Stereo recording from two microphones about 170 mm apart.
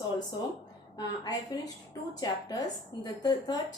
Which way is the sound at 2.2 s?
20° left (ahead or behind).